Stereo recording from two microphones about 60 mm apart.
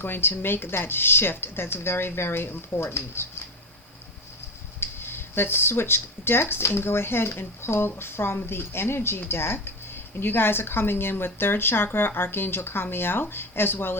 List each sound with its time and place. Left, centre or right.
0.0 s speech: left
4.8 s speech: left